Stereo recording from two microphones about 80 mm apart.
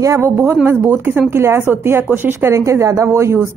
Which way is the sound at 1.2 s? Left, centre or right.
Right.